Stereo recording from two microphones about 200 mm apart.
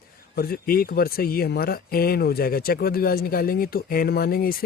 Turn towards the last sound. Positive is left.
turn(degrees=45)  # may be behind; listen again after turning